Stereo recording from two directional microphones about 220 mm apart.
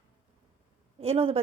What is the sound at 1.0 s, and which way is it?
Speech, 25° right (ahead or behind).